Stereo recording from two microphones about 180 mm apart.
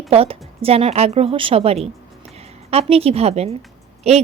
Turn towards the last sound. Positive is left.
turn(degrees=-35)  # may be behind; listen again after turning